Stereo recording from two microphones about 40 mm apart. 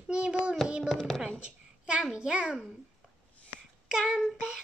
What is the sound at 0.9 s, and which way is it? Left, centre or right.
Speech, centre.